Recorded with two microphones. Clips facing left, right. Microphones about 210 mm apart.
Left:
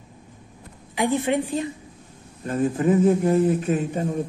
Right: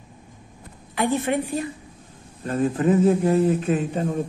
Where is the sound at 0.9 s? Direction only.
15° left (ahead or behind).